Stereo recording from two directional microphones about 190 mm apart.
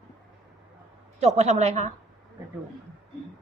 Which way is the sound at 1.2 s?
35° right (ahead or behind).